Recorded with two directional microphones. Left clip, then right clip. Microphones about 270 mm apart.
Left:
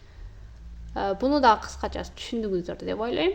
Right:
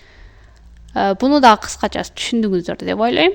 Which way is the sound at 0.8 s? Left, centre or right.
Right.